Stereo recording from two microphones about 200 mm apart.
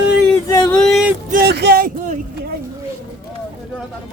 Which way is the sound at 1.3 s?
55° right (ahead or behind).